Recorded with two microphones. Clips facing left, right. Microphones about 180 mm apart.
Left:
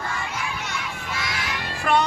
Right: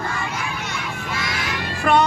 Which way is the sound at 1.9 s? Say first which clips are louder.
Right 3 dB; 55° right (ahead or behind).